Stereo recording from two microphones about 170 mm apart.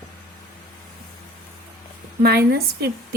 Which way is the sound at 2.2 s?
65° right (ahead or behind).